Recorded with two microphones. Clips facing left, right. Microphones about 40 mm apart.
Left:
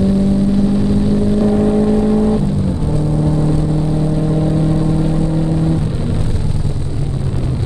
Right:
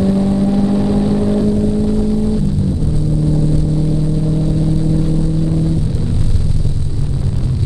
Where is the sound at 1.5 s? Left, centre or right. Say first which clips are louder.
Left 3 dB; left.